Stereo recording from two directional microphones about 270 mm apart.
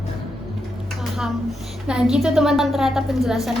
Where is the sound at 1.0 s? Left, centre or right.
Centre.